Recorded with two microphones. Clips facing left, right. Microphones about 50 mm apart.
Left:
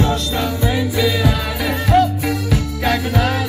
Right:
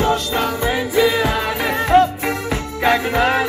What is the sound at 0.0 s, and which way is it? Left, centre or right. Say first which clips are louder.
Music: right 1 dB; right.